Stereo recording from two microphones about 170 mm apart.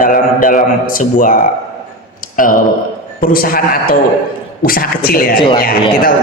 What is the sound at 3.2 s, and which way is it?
A man's voice, 55° left (ahead or behind).